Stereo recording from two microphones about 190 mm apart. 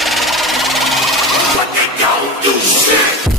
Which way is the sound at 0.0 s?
Centre (ahead or behind).